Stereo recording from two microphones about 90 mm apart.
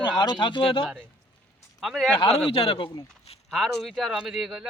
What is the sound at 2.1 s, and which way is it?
Speech, 80° left.